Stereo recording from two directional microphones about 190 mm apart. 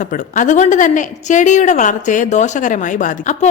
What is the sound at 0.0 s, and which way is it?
A woman's voice, 45° left (ahead or behind).